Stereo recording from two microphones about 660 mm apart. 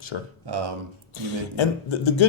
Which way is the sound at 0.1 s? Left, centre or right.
Left.